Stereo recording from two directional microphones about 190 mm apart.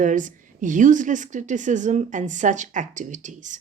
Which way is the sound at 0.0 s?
40° right (ahead or behind).